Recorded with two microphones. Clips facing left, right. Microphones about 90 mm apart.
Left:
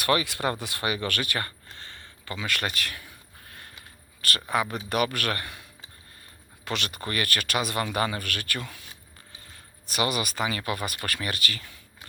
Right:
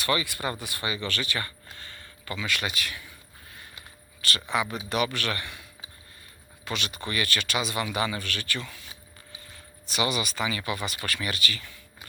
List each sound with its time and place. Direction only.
0.0 s speech: 65° left (ahead or behind)
1.8 s a sound: 30° left (ahead or behind)
2.4 s speech: 50° left (ahead or behind)
4.2 s speech: 45° left (ahead or behind)
6.7 s speech: 55° left (ahead or behind)
9.9 s speech: 45° left (ahead or behind)